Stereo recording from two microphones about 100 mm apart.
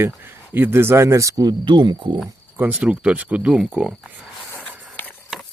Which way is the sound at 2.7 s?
10° right (ahead or behind).